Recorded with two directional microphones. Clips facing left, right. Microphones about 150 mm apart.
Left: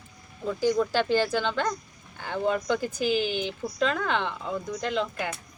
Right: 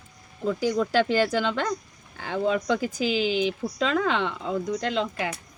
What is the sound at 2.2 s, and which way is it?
Speech, 90° right.